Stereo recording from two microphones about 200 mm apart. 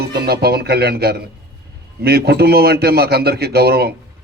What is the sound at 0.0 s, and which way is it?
A man's voice, 55° right (ahead or behind).